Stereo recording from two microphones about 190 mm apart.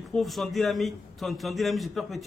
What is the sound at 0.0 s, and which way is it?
A man's voice, centre (ahead or behind).